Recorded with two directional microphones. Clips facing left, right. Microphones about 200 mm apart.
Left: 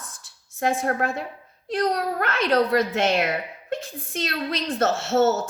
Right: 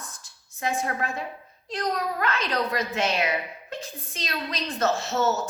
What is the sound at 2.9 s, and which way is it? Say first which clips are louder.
Speech: left 3 dB; 50° left (ahead or behind).